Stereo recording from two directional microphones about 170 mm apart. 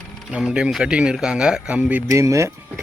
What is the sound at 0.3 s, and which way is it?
Speech, 5° right (ahead or behind).